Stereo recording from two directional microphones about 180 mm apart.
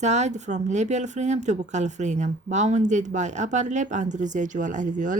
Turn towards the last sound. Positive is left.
turn(degrees=-45)  # may be behind; listen again after turning